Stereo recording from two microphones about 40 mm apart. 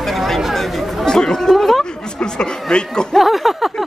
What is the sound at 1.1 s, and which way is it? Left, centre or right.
Chatter, centre.